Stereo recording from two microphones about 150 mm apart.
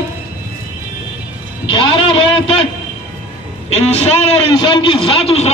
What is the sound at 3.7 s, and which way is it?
Speech, 45° left (ahead or behind).